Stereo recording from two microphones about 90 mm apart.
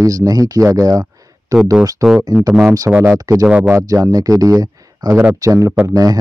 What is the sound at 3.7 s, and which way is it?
Speech, 35° right (ahead or behind).